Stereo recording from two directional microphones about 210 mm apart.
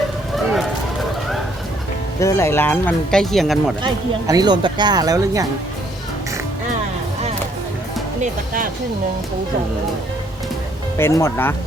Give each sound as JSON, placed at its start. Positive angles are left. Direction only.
{"t": 0.3, "sound": "run", "side_deg": 0}
{"t": 2.2, "sound": "speech", "side_deg": 15}
{"t": 4.3, "sound": "speech", "side_deg": -20}
{"t": 8.2, "sound": "speech", "side_deg": -40}
{"t": 10.9, "sound": "speech", "side_deg": 15}